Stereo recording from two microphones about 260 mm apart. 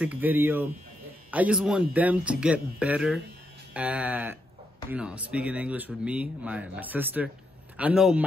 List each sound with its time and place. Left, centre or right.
0.0 s a man's voice: centre